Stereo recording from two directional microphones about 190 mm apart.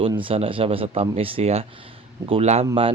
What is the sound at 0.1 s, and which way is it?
Speech, 25° right (ahead or behind).